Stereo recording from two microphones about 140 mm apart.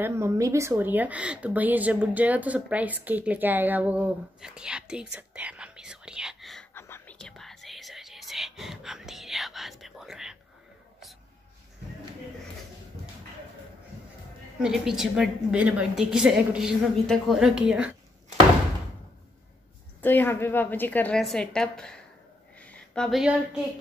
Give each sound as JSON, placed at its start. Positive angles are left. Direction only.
{"t": 0.0, "sound": "speech", "side_deg": -20}
{"t": 6.7, "sound": "whispering", "side_deg": 15}
{"t": 7.2, "sound": "whispering", "side_deg": 5}
{"t": 14.6, "sound": "a woman's voice", "side_deg": -5}
{"t": 20.0, "sound": "a woman's voice", "side_deg": 15}